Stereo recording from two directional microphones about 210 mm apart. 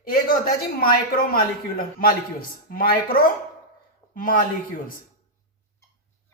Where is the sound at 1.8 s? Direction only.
45° left (ahead or behind).